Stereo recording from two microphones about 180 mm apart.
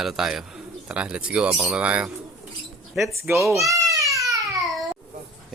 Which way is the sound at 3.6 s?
20° right (ahead or behind).